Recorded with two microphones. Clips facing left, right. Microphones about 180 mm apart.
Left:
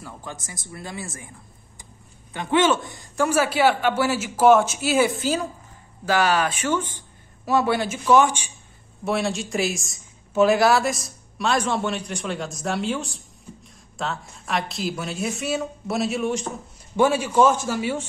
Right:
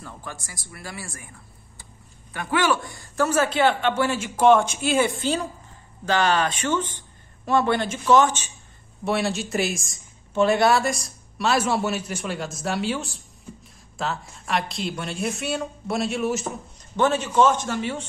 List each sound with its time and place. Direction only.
0.2 s speech: 20° left (ahead or behind)
2.3 s a man's voice: 20° left (ahead or behind)
9.0 s speech: centre (ahead or behind)
16.9 s a man's voice: 10° left (ahead or behind)